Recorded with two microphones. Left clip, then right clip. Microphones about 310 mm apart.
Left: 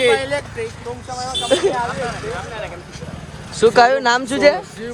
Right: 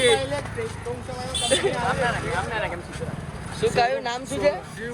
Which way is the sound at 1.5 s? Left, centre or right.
Left.